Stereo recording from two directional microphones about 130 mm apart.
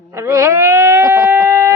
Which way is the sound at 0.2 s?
25° right (ahead or behind).